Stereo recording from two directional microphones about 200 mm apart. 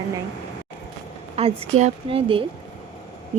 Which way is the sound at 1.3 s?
30° right (ahead or behind).